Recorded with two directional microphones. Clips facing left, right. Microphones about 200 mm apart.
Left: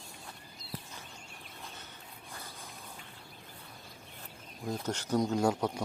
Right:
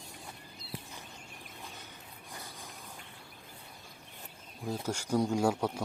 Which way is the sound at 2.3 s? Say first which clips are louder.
Right 1 dB; 15° right (ahead or behind).